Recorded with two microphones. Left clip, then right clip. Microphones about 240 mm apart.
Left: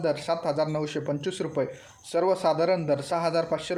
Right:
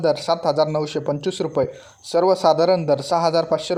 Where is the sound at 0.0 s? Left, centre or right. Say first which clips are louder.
Right 7 dB; right.